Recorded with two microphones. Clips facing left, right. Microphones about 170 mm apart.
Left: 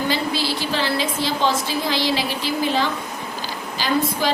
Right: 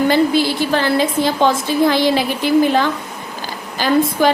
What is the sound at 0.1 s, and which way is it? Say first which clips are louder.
A woman's voice: right 8 dB; 50° right (ahead or behind).